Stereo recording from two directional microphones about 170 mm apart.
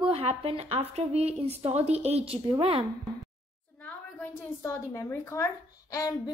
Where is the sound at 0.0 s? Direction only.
35° right (ahead or behind).